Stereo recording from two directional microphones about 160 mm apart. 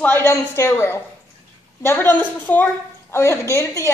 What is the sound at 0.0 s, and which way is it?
A woman's voice, 15° left (ahead or behind).